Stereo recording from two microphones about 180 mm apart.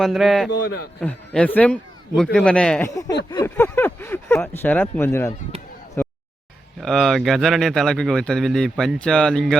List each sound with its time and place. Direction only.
0.0 s speech: centre (ahead or behind)
3.2 s speech: 15° left (ahead or behind)
6.0 s a sound: 10° left (ahead or behind)
6.7 s speech: centre (ahead or behind)